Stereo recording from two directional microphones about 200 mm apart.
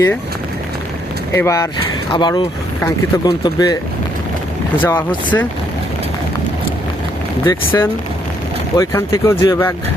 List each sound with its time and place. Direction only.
1.3 s speech: 15° left (ahead or behind)
4.8 s speech: 10° left (ahead or behind)
7.4 s speech: 10° left (ahead or behind)